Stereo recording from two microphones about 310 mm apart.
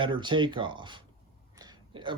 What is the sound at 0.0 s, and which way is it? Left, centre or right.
Speech, centre.